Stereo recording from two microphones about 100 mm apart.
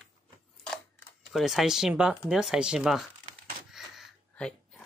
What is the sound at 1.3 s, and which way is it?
Speech, centre (ahead or behind).